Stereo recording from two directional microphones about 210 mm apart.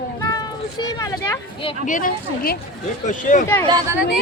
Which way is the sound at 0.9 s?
15° left (ahead or behind).